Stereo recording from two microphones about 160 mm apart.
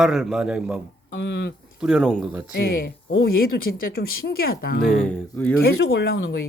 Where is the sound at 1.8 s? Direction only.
Centre (ahead or behind).